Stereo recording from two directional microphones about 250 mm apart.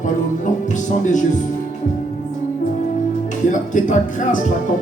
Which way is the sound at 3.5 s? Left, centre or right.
Left.